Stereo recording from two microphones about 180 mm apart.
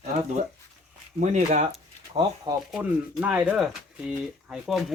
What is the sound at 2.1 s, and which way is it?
Speech, 20° right (ahead or behind).